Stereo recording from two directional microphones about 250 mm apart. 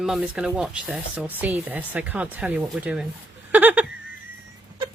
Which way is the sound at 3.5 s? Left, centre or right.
Centre.